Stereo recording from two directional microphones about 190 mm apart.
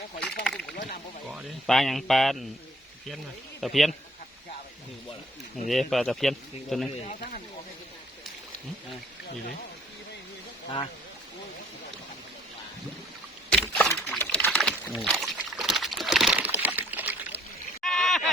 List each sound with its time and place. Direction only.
0.2 s speech: 5° left (ahead or behind)
3.6 s speech: centre (ahead or behind)
5.6 s speech: centre (ahead or behind)
6.9 s speech: 35° left (ahead or behind)
13.5 s a sound: 5° left (ahead or behind)